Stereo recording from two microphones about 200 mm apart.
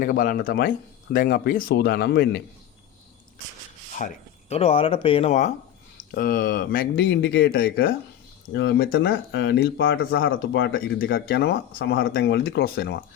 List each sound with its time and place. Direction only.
0.0 s speech: 45° left (ahead or behind)
3.9 s speech: 35° left (ahead or behind)
6.0 s speech: 45° left (ahead or behind)